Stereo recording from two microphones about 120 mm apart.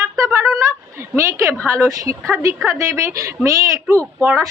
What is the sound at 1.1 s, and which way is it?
A woman's voice, 25° right (ahead or behind).